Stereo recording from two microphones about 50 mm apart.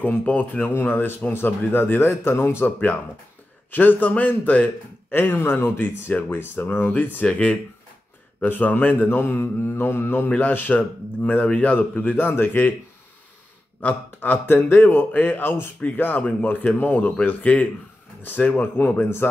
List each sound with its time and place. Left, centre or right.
0.2 s mantra: left
0.7 s mantra: left
1.3 s speech: left
2.0 s a man's voice: left
3.7 s mantra: left
10.7 s speech: left
11.2 s mantra: left
13.7 s a sound: left
14.4 s mantra: left
16.5 s mantra: left